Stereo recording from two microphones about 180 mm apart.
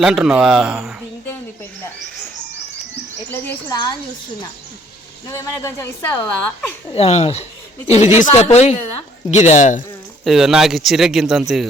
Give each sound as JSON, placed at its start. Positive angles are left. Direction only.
{"t": 0.0, "sound": "speech", "side_deg": -5}
{"t": 3.2, "sound": "a sound", "side_deg": 10}
{"t": 3.7, "sound": "speech", "side_deg": 20}
{"t": 5.3, "sound": "speech", "side_deg": 15}
{"t": 6.9, "sound": "speech", "side_deg": 35}
{"t": 10.2, "sound": "speech", "side_deg": 0}